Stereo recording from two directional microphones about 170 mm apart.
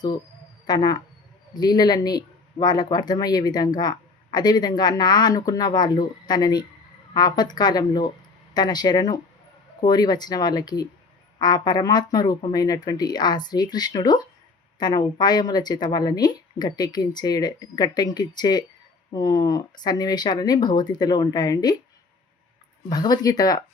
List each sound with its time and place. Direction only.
0.7 s speech: 25° left (ahead or behind)
22.9 s speech: 20° left (ahead or behind)